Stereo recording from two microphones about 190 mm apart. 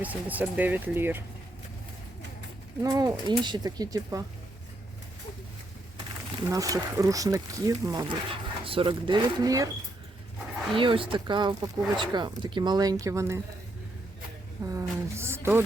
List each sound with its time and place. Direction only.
0.0 s speech: 10° right (ahead or behind)
2.8 s speech: 20° right (ahead or behind)
6.4 s speech: 15° right (ahead or behind)
10.8 s speech: 25° right (ahead or behind)
14.6 s speech: 15° right (ahead or behind)